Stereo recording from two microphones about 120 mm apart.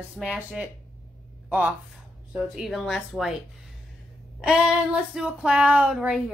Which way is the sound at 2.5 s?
Centre (ahead or behind).